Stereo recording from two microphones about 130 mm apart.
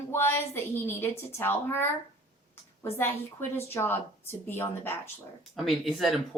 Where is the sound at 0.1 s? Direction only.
20° left (ahead or behind).